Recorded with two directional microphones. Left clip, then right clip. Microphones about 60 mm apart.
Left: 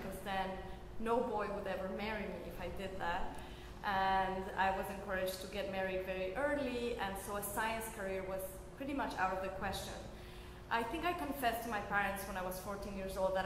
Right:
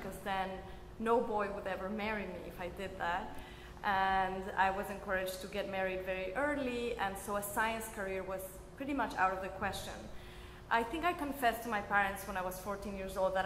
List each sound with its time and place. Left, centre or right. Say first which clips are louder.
0.2 s a sound: right 3 dB; right
1.0 s a man's voice: right 3 dB; right
10.8 s a man's voice: right 3 dB; right